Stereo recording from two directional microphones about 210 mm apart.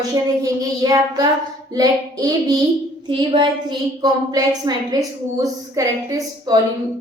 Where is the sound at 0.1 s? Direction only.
15° right (ahead or behind).